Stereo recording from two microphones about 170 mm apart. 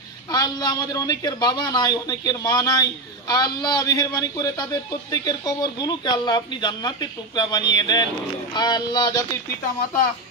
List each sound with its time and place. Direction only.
0.3 s speech: 25° left (ahead or behind)